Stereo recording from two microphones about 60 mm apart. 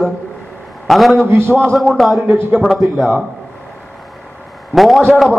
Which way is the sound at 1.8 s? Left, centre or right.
Centre.